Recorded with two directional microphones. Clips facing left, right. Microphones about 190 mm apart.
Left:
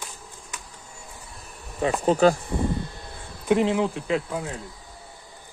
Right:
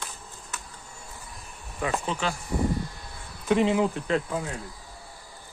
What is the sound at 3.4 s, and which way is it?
Speech, centre (ahead or behind).